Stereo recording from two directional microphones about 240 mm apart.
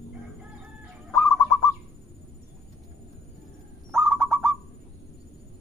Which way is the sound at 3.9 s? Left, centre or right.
Centre.